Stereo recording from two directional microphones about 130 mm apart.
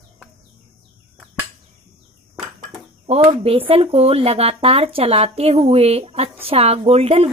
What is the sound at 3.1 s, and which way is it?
Speech, 45° right (ahead or behind).